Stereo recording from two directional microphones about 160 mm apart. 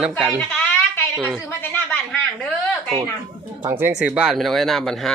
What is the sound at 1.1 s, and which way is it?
Speech, centre (ahead or behind).